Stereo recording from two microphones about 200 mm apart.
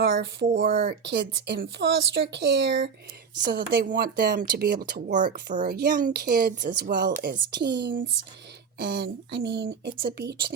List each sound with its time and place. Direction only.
0.0 s speech: 55° right (ahead or behind)
3.5 s speech: 50° right (ahead or behind)